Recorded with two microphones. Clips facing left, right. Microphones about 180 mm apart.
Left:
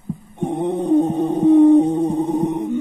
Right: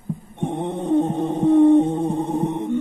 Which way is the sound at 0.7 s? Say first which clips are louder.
Left 3 dB; 35° left (ahead or behind).